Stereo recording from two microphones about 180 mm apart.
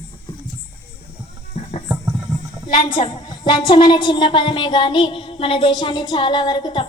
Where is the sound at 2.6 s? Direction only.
25° left (ahead or behind).